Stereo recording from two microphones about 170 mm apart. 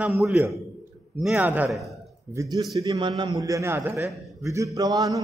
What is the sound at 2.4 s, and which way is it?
A man's voice, 20° right (ahead or behind).